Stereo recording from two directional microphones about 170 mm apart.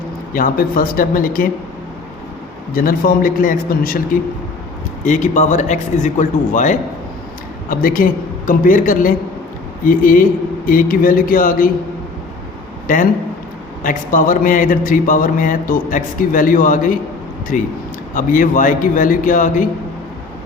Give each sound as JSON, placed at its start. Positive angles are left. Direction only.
{"t": 0.3, "sound": "a man's voice", "side_deg": 55}
{"t": 2.7, "sound": "a man's voice", "side_deg": 55}
{"t": 5.0, "sound": "a man's voice", "side_deg": 45}
{"t": 12.9, "sound": "speech", "side_deg": 55}